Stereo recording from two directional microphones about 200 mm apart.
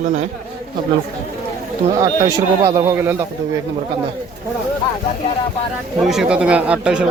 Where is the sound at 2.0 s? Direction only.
20° right (ahead or behind).